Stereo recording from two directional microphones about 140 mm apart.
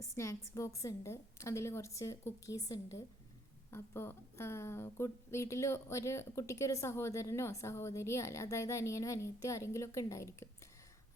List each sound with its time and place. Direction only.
0.0 s speech: 20° left (ahead or behind)